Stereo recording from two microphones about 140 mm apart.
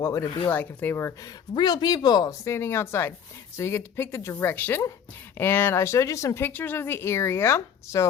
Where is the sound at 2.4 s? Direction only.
15° left (ahead or behind).